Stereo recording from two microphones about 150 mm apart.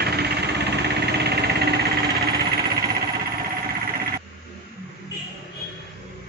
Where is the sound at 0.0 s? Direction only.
90° right.